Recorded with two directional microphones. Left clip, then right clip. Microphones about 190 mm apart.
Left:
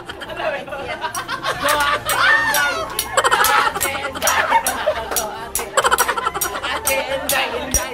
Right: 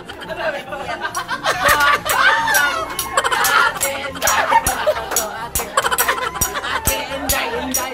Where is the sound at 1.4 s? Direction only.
40° right (ahead or behind).